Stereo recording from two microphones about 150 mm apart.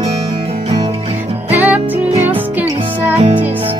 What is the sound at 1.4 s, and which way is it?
Music, 10° right (ahead or behind).